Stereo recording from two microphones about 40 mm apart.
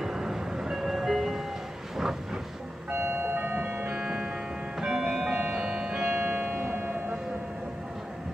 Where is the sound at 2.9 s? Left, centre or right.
Right.